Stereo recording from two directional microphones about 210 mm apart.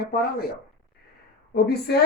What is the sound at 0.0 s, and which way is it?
Speech, 45° left (ahead or behind).